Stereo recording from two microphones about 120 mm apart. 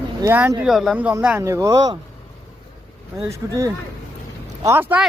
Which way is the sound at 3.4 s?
25° right (ahead or behind).